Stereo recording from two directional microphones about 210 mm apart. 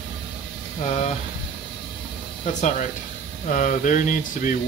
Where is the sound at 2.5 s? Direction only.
35° left (ahead or behind).